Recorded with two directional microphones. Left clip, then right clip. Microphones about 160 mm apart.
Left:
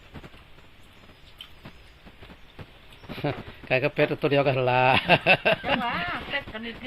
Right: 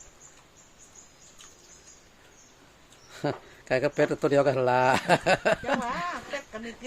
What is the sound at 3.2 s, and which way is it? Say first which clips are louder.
A man's voice: even; 20° right (ahead or behind).